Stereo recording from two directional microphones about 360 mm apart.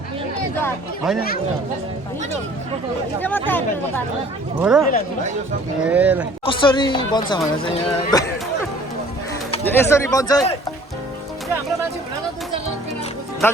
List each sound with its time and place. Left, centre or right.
1.0 s speech: centre
3.2 s speech: centre
4.6 s speech: centre
6.4 s speech: centre
9.5 s speech: centre
13.4 s speech: centre